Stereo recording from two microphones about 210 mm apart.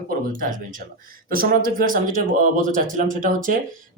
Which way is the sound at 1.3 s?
45° right (ahead or behind).